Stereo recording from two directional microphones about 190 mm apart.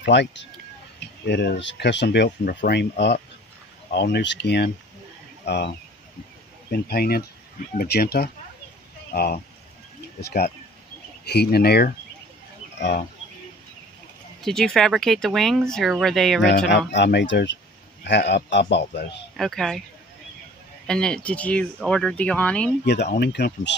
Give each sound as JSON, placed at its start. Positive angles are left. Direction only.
{"t": 0.0, "sound": "speech", "side_deg": 65}
{"t": 6.7, "sound": "speech", "side_deg": 55}
{"t": 14.4, "sound": "speech", "side_deg": 5}
{"t": 16.4, "sound": "speech", "side_deg": 60}
{"t": 19.3, "sound": "speech", "side_deg": 0}
{"t": 20.8, "sound": "speech", "side_deg": 5}
{"t": 23.1, "sound": "speech", "side_deg": 55}